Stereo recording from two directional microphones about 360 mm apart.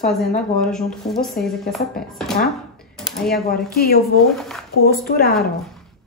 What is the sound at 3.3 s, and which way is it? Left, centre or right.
Speech, left.